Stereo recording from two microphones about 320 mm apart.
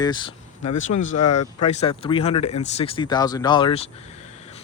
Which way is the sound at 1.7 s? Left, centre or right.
Centre.